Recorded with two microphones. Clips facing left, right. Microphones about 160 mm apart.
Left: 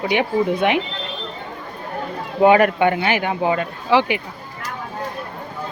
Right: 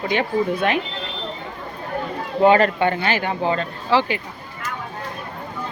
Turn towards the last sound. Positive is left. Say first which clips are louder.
# left 2 dB
turn(degrees=15)  # may be behind; listen again after turning